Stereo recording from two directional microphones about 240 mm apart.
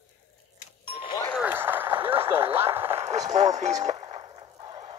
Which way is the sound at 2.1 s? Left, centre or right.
Right.